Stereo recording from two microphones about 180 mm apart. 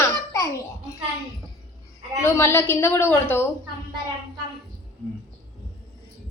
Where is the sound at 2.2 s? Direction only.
15° left (ahead or behind).